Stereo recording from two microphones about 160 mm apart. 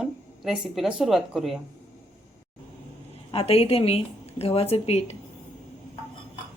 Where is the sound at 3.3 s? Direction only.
35° left (ahead or behind).